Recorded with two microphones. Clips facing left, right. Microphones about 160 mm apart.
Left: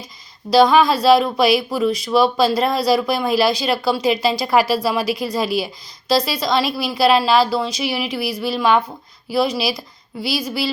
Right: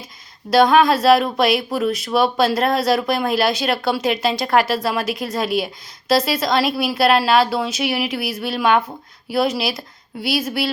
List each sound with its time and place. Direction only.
0.5 s a woman's voice: centre (ahead or behind)
10.2 s speech: 55° right (ahead or behind)